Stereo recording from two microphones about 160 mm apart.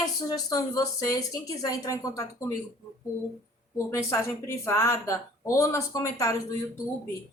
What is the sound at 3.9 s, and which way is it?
A woman's voice, 20° left (ahead or behind).